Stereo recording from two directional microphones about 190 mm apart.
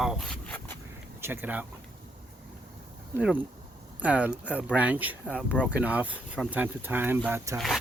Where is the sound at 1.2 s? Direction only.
10° right (ahead or behind).